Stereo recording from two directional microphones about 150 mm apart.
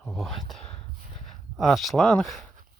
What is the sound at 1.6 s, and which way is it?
Speech, centre (ahead or behind).